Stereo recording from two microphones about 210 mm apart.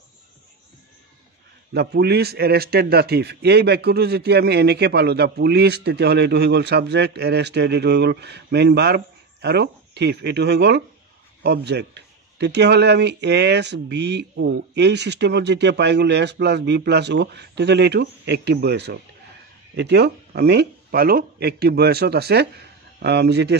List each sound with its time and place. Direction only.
1.7 s a man's voice: 50° right (ahead or behind)